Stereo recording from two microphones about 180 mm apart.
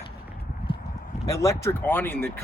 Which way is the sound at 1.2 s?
15° left (ahead or behind).